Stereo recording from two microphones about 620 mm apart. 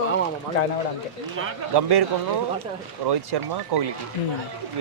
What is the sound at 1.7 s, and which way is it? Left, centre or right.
Speech, right.